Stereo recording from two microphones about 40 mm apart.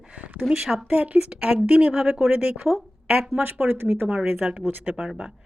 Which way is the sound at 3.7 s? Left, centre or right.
Right.